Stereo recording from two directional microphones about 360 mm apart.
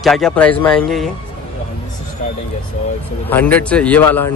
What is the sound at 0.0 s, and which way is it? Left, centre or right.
Speech, centre.